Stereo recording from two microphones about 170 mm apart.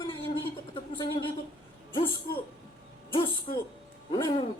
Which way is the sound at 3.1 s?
30° left (ahead or behind).